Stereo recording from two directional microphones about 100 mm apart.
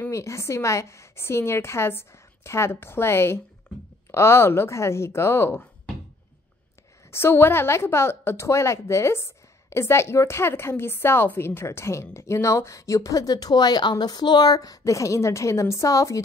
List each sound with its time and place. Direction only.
0.0 s a woman's voice: 30° left (ahead or behind)
7.1 s a woman's voice: 25° left (ahead or behind)